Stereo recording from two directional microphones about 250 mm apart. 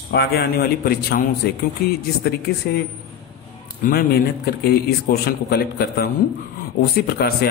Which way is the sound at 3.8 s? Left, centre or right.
Left.